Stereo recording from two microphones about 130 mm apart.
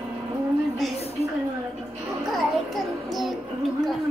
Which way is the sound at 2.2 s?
Centre (ahead or behind).